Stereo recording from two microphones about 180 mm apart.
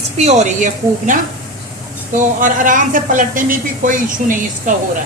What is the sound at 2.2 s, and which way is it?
Speech, 45° right (ahead or behind).